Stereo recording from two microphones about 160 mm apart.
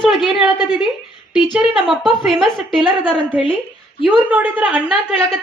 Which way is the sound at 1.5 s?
Centre (ahead or behind).